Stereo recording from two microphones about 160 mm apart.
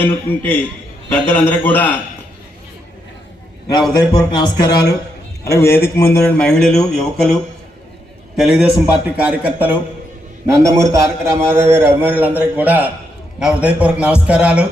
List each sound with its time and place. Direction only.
0.0 s a man's voice: 10° left (ahead or behind)
4.1 s a man's voice: 30° left (ahead or behind)
6.4 s speech: 5° left (ahead or behind)
8.4 s a man's voice: centre (ahead or behind)